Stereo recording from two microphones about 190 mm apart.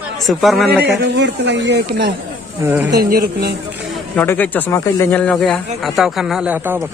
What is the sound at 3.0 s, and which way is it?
Speech, 50° right (ahead or behind).